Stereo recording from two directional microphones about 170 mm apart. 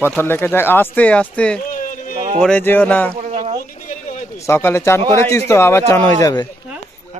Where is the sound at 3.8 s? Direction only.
45° left (ahead or behind).